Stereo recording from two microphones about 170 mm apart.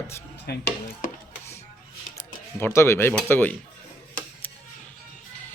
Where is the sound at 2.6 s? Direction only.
15° left (ahead or behind).